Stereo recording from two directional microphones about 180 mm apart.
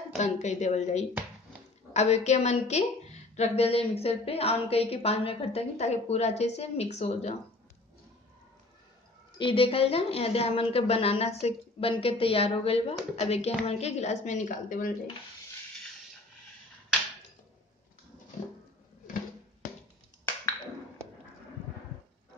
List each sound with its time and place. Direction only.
0.2 s a woman's voice: 40° left (ahead or behind)
9.4 s a woman's voice: 30° left (ahead or behind); by 15.0 s 45° left (ahead or behind)